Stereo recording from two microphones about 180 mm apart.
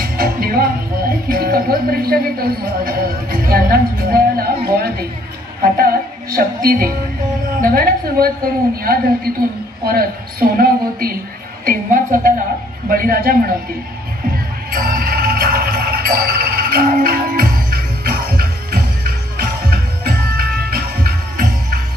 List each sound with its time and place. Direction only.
0.0 s music: 55° right (ahead or behind)
1.3 s speech: 55° right (ahead or behind)
6.3 s a woman's voice: 55° right (ahead or behind)
14.7 s music: 50° right (ahead or behind)